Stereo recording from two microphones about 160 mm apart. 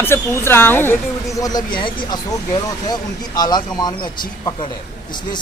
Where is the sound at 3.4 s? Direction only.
25° left (ahead or behind).